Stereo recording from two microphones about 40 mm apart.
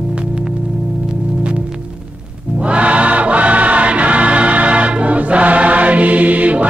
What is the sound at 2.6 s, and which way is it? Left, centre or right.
Music, right.